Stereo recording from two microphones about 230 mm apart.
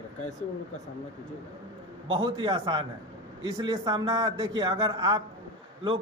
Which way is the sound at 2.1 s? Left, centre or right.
Right.